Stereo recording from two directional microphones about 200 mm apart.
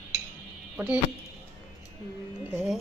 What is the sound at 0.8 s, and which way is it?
Speech, 5° right (ahead or behind).